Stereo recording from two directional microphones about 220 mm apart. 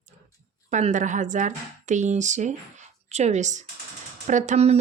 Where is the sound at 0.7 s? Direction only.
35° right (ahead or behind).